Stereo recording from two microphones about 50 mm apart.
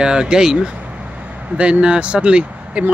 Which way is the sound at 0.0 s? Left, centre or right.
Centre.